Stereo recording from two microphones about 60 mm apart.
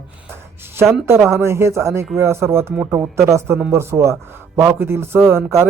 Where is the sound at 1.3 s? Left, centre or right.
Right.